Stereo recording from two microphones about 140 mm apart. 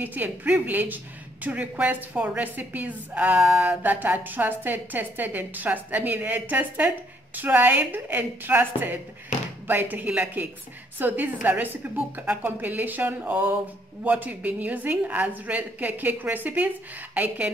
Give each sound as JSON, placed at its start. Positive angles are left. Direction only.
{"t": 0.0, "sound": "speech", "side_deg": -10}
{"t": 9.3, "sound": "a sound", "side_deg": 60}
{"t": 9.7, "sound": "speech", "side_deg": -10}